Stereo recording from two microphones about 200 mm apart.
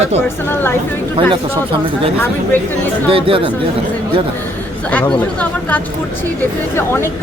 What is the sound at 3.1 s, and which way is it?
Speech, 25° right (ahead or behind).